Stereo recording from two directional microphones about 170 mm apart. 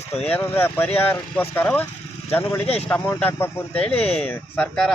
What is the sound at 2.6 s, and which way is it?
Speech, 35° left (ahead or behind).